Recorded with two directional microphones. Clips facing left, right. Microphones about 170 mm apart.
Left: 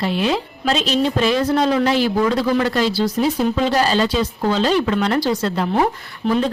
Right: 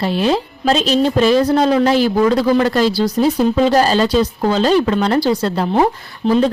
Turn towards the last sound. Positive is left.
turn(degrees=-30)  # may be behind; listen again after turning